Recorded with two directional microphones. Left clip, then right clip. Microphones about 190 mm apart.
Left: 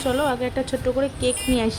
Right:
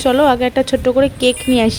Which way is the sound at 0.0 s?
35° right (ahead or behind).